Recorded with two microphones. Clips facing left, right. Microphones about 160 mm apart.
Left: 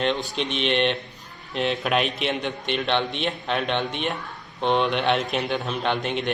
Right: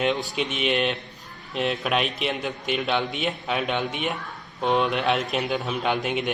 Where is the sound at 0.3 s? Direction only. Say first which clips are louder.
Left 1 dB; 5° right (ahead or behind).